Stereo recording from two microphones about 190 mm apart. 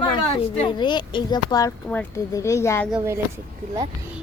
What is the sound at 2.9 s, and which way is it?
Speech, 15° right (ahead or behind).